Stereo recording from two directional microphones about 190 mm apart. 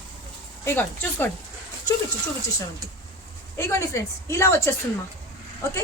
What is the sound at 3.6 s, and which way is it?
A woman's voice, 15° left (ahead or behind).